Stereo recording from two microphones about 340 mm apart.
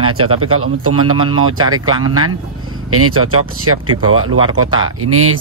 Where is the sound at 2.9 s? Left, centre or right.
Right.